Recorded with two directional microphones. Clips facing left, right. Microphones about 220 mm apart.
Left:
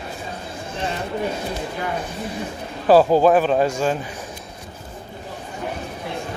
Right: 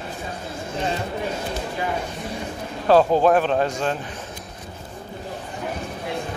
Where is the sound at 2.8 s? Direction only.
5° left (ahead or behind).